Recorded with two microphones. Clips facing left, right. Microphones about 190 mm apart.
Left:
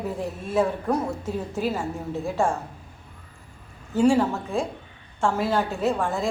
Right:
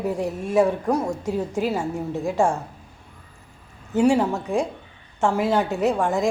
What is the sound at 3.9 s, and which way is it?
A woman's voice, 15° right (ahead or behind).